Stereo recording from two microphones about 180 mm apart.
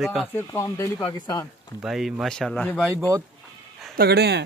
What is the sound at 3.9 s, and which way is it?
Speech, 60° right (ahead or behind).